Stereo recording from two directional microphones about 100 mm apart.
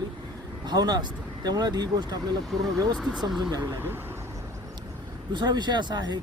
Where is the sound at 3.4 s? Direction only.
40° right (ahead or behind).